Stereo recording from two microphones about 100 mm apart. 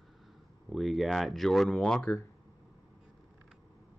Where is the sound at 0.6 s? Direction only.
Centre (ahead or behind).